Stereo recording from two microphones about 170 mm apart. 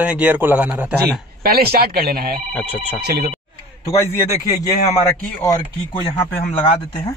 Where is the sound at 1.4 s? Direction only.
65° right (ahead or behind).